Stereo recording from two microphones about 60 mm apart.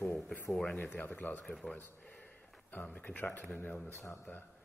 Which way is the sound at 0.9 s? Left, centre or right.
Left.